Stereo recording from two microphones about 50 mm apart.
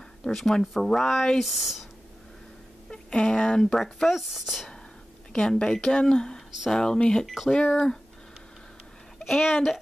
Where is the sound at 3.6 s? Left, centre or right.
Centre.